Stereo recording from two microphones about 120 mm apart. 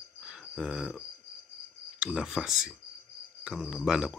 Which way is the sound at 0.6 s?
5° right (ahead or behind).